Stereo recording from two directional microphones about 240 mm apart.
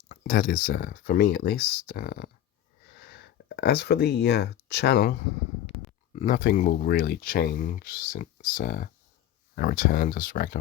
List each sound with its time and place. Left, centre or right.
0.1 s speech: left